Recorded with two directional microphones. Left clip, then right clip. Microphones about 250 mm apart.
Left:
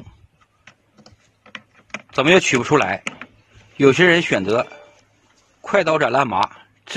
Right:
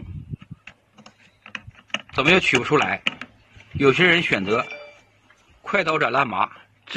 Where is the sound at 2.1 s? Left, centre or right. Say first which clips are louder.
Left 3 dB; left.